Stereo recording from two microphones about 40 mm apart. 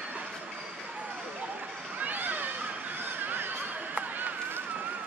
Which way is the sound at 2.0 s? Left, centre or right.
Right.